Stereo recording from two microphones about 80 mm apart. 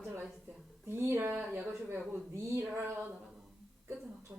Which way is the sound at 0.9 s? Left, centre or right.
Right.